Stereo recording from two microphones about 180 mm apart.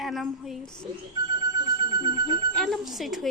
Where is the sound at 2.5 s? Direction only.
Centre (ahead or behind).